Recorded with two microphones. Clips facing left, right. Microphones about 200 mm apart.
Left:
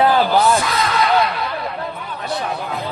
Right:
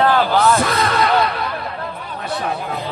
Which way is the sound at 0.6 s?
55° right (ahead or behind).